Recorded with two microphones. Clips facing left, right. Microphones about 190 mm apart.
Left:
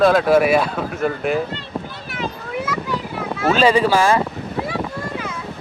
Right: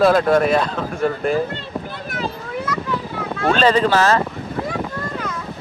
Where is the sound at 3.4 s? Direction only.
5° left (ahead or behind).